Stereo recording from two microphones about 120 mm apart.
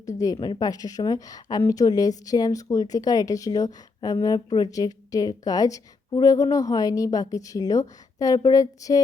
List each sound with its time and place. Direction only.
0.0 s speech: 25° left (ahead or behind)
0.3 s a woman's voice: 50° left (ahead or behind)
0.6 s a woman's voice: 30° left (ahead or behind)